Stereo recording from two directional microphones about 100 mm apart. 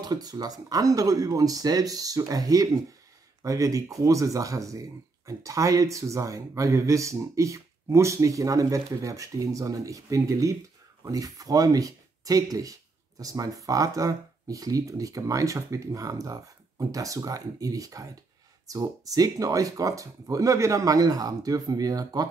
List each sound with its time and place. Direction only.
0.0 s speech: 40° right (ahead or behind)